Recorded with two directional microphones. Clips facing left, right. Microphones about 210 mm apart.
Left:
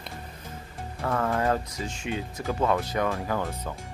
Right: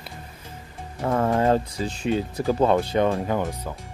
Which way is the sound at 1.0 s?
25° right (ahead or behind).